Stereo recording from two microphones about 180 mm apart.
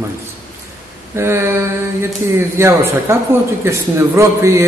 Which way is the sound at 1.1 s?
15° right (ahead or behind).